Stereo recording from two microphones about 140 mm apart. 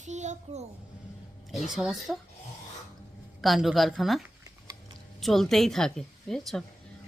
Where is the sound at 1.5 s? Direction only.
Centre (ahead or behind).